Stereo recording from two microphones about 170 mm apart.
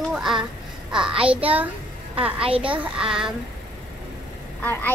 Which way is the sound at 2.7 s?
5° right (ahead or behind).